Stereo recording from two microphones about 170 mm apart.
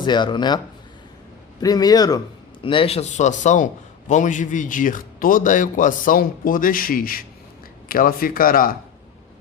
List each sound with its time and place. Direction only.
0.0 s speech: 25° left (ahead or behind)
1.6 s speech: 20° left (ahead or behind)
2.6 s a man's voice: 35° left (ahead or behind); by 8.7 s 55° left (ahead or behind)